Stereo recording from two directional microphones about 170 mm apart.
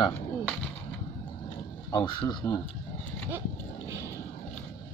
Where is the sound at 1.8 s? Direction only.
25° left (ahead or behind).